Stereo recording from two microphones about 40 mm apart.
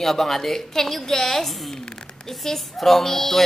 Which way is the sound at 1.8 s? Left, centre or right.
Centre.